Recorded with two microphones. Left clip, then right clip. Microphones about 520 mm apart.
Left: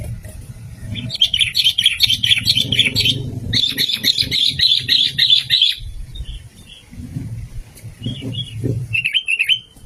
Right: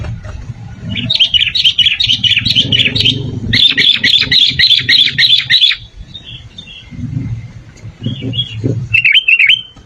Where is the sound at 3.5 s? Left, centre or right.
Left.